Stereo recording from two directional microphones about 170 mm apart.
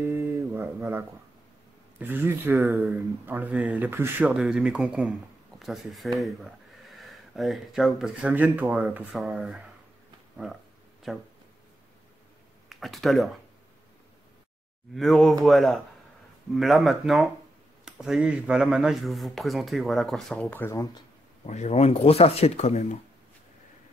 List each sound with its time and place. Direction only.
0.0 s a sound: 15° right (ahead or behind)
2.0 s speech: 10° right (ahead or behind)
10.3 s a sound: centre (ahead or behind)
12.6 s speech: centre (ahead or behind)
15.0 s speech: centre (ahead or behind); by 21.0 s 20° left (ahead or behind)
21.5 s speech: 40° left (ahead or behind)